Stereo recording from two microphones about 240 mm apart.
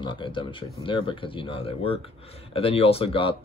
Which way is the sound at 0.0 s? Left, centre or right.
Centre.